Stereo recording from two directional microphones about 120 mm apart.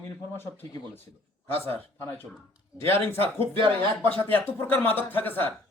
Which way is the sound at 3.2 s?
50° right (ahead or behind).